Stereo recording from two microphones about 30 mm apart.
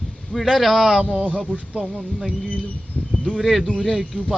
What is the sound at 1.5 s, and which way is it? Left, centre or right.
Speech, left.